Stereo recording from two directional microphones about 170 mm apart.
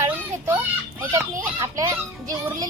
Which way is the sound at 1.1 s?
20° right (ahead or behind).